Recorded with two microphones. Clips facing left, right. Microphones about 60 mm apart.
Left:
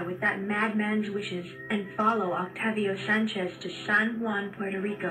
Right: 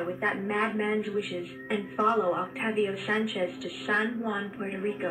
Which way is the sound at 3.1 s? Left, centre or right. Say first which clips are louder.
Left 2 dB; left.